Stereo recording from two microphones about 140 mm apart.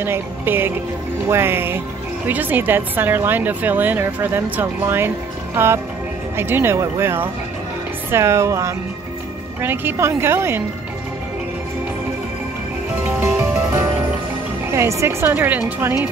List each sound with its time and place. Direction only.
0.0 s speech: 15° right (ahead or behind)
13.0 s music: 15° right (ahead or behind)
14.7 s speech: 20° right (ahead or behind)